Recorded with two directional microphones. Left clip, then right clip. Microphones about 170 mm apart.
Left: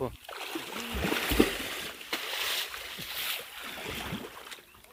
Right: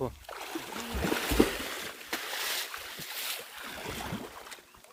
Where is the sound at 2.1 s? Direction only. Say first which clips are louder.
Left 2 dB; 45° right (ahead or behind).